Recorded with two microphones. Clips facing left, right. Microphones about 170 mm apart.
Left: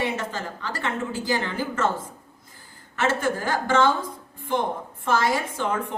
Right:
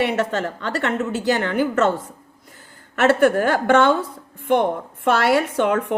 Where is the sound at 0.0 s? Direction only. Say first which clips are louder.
Right 7 dB; 70° right (ahead or behind).